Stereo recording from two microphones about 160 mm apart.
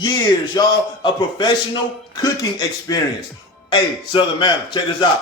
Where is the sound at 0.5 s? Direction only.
30° left (ahead or behind).